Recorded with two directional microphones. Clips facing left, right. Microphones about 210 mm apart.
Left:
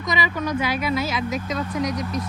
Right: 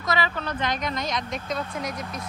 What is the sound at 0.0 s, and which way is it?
Speech, 15° left (ahead or behind).